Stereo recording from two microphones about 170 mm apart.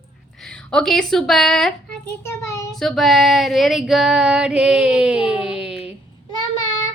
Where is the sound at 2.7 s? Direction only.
Centre (ahead or behind).